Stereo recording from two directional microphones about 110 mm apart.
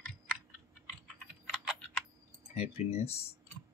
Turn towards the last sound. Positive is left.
turn(degrees=80)